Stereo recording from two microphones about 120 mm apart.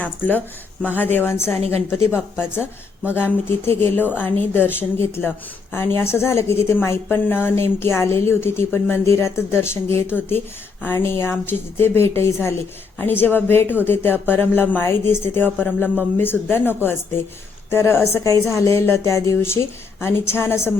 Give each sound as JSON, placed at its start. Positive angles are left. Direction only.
{"t": 0.0, "sound": "speech", "side_deg": 15}
{"t": 3.1, "sound": "a woman's voice", "side_deg": 15}